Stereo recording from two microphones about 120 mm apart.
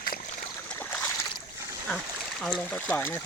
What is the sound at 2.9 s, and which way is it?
Speech, 20° left (ahead or behind).